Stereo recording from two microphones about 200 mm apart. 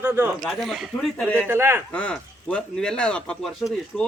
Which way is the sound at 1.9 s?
5° left (ahead or behind).